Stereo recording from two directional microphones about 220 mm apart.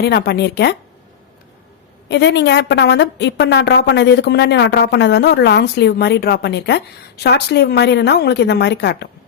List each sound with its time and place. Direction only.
0.0 s a woman's voice: 45° left (ahead or behind)
2.0 s a woman's voice: 50° left (ahead or behind)